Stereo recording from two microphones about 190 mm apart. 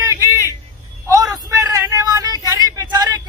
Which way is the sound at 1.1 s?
15° right (ahead or behind).